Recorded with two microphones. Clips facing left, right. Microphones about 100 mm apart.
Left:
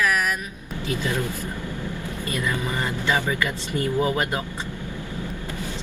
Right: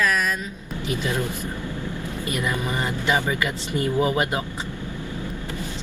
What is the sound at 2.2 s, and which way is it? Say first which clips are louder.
Speech: right 1 dB; 20° right (ahead or behind).